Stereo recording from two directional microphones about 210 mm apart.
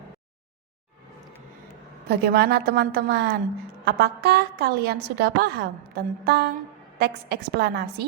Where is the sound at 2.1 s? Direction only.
50° right (ahead or behind).